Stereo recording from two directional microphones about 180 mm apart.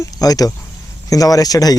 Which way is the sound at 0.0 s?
20° left (ahead or behind).